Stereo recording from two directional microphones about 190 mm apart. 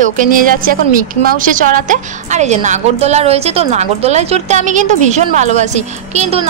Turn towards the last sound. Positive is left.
turn(degrees=-35)  # may be behind; listen again after turning